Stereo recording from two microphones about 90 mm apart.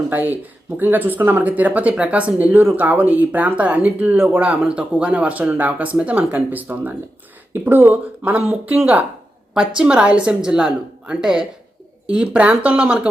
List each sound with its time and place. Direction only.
0.1 s speech: 20° right (ahead or behind)
9.6 s speech: 10° right (ahead or behind)